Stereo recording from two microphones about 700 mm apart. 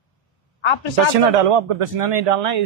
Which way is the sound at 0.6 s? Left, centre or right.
Left.